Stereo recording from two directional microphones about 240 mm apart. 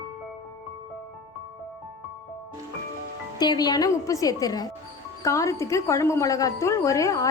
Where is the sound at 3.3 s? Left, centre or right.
Centre.